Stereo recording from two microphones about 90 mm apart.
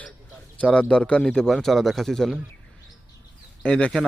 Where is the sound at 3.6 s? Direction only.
10° left (ahead or behind).